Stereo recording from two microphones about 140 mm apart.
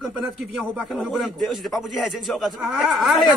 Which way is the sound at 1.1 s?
Centre (ahead or behind).